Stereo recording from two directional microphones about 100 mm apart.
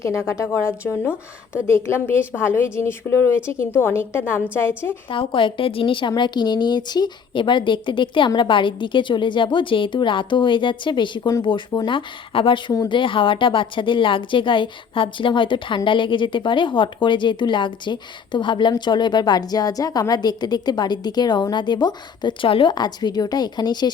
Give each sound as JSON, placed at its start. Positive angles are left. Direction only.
{"t": 0.0, "sound": "a woman's voice", "side_deg": 30}
{"t": 5.0, "sound": "a woman's voice", "side_deg": 60}
{"t": 11.9, "sound": "a woman's voice", "side_deg": 60}
{"t": 22.7, "sound": "a woman's voice", "side_deg": 45}